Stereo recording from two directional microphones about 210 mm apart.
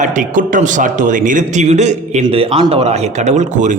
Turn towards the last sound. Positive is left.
turn(degrees=-35)  # may be behind; listen again after turning